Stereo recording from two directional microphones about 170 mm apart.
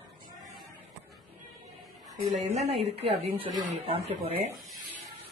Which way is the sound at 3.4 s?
35° right (ahead or behind).